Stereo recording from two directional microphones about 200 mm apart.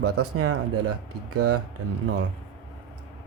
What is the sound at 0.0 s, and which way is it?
Speech, 90° right.